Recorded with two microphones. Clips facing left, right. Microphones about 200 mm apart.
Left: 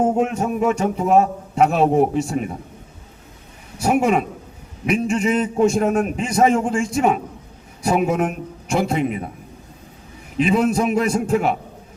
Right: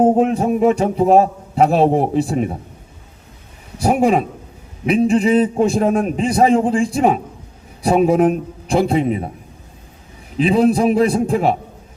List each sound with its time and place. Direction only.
0.0 s a man's voice: 35° right (ahead or behind)
3.8 s a man's voice: 35° right (ahead or behind)
10.3 s a man's voice: 35° right (ahead or behind)